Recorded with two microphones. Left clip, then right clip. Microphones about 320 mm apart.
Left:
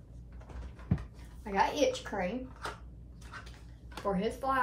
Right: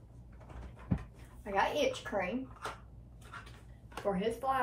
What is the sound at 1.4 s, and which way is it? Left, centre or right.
Speech, centre.